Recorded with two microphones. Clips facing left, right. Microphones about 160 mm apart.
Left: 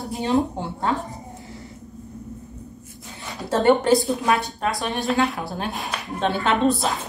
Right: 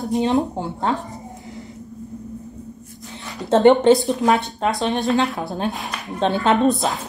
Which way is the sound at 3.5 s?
20° right (ahead or behind).